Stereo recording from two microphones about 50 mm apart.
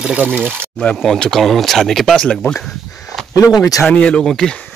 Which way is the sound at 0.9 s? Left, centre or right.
Centre.